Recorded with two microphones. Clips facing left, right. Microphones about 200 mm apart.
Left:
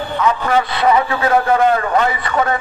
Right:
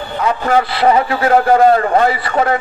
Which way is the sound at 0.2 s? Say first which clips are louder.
Right 2 dB; 35° right (ahead or behind).